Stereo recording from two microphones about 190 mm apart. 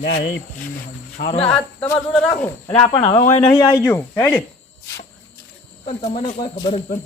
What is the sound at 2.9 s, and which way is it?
Speech, 25° left (ahead or behind).